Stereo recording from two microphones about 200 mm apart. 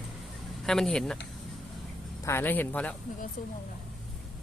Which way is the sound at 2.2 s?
10° left (ahead or behind).